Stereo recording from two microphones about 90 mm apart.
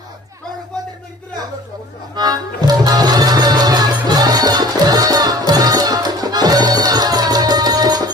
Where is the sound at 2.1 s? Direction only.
45° right (ahead or behind).